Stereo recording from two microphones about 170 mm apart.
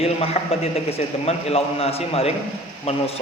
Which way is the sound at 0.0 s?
35° left (ahead or behind).